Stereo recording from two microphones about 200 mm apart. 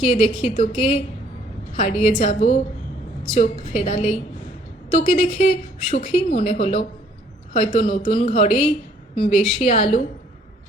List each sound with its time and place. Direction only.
0.0 s a woman's voice: 25° left (ahead or behind)